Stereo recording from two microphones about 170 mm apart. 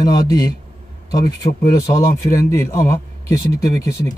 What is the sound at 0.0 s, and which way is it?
Speech, 25° left (ahead or behind).